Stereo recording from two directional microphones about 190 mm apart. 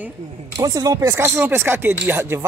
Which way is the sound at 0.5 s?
20° right (ahead or behind).